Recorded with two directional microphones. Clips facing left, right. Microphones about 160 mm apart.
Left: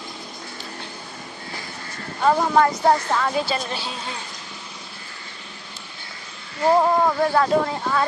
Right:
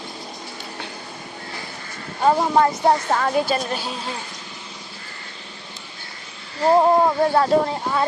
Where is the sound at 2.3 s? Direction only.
20° right (ahead or behind).